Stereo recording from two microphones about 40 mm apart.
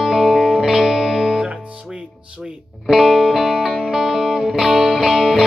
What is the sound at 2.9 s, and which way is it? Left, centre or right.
Music, centre.